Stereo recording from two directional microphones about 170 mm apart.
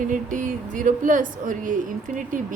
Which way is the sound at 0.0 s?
50° right (ahead or behind).